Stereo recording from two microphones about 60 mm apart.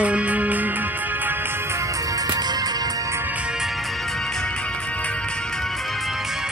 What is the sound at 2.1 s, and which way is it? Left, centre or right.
Music, right.